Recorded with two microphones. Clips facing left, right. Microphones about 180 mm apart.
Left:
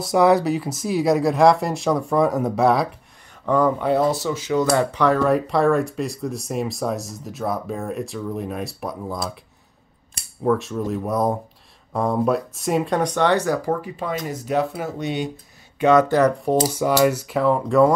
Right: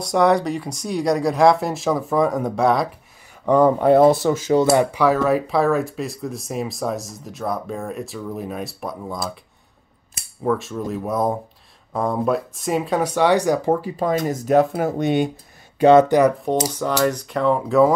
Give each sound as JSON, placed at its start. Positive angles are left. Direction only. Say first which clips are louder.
{"t": 0.0, "sound": "speech", "louder": "left 1 dB", "side_deg": 0}
{"t": 3.4, "sound": "speech", "louder": "right 4 dB", "side_deg": -20}
{"t": 3.8, "sound": "speech", "louder": "right 6 dB", "side_deg": -55}
{"t": 4.7, "sound": "speech", "louder": "right 1 dB", "side_deg": -5}
{"t": 10.1, "sound": "cutlery", "louder": "left 1 dB", "side_deg": 0}
{"t": 11.9, "sound": "speech", "louder": "even", "side_deg": 0}
{"t": 15.8, "sound": "speech", "louder": "right 4 dB", "side_deg": -30}
{"t": 16.1, "sound": "speech", "louder": "right 2 dB", "side_deg": -10}
{"t": 16.6, "sound": "speech", "louder": "left 2 dB", "side_deg": 10}